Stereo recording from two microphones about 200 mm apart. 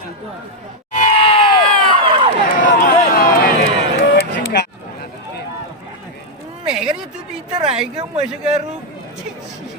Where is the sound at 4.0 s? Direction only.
60° left (ahead or behind).